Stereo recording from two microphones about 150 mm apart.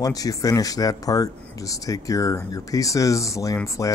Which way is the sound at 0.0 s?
25° left (ahead or behind).